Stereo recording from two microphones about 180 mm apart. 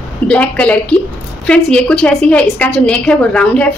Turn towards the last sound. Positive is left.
turn(degrees=5)  # may be behind; listen again after turning